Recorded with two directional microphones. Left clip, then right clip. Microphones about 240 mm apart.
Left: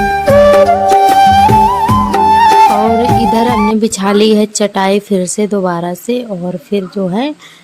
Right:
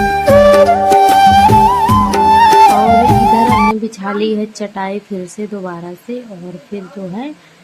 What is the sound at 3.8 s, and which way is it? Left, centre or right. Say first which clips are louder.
A woman's voice: left 8 dB; left.